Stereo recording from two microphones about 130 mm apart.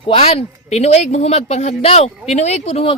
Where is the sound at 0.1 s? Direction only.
50° left (ahead or behind).